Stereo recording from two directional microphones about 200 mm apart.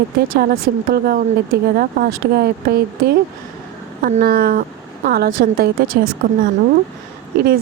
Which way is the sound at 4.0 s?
45° right (ahead or behind).